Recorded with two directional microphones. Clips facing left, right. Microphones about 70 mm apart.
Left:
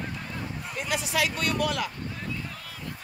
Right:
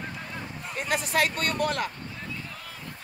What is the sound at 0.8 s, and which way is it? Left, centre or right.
Speech, right.